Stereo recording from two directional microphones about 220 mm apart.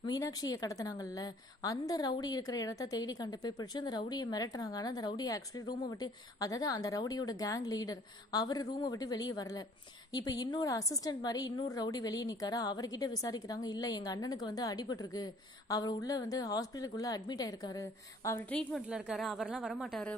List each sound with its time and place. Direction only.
0.0 s a woman's voice: 20° left (ahead or behind)
18.8 s speech: 5° right (ahead or behind)